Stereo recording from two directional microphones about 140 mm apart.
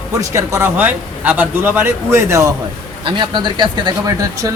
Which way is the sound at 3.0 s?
35° right (ahead or behind).